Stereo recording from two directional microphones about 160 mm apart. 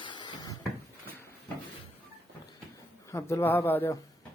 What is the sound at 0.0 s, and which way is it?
Cupboard open or close, 30° left (ahead or behind).